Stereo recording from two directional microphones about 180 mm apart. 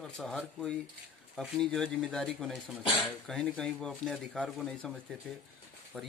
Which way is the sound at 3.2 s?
5° left (ahead or behind).